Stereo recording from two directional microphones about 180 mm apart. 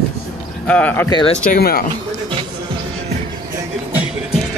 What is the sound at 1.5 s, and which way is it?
Speech, 55° left (ahead or behind).